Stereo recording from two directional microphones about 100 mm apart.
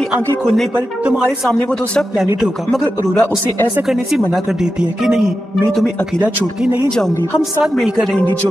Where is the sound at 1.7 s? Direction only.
5° left (ahead or behind).